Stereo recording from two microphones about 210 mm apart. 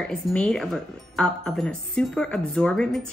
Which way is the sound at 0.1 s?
5° left (ahead or behind).